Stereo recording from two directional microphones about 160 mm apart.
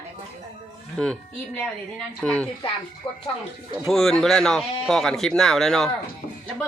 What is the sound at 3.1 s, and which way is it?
Speech, 30° left (ahead or behind).